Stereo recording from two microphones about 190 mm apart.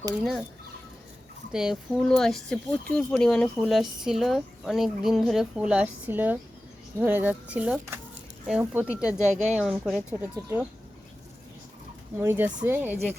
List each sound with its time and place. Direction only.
1.5 s speech: centre (ahead or behind)
9.3 s speech: 35° right (ahead or behind)
9.6 s speech: 5° right (ahead or behind)
12.1 s speech: 10° right (ahead or behind)